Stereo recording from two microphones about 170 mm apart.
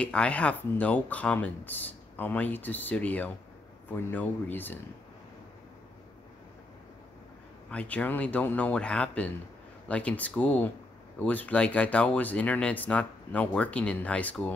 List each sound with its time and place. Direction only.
0.0 s speech: 5° left (ahead or behind)
7.7 s speech: 10° left (ahead or behind)